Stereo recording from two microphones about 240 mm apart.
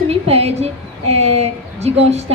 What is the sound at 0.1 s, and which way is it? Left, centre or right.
A woman's voice, right.